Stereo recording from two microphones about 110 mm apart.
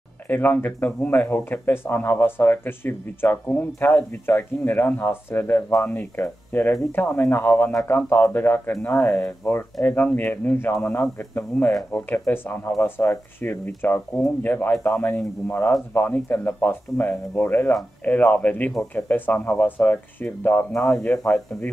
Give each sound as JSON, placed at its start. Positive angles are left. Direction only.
{"t": 0.3, "sound": "speech", "side_deg": 20}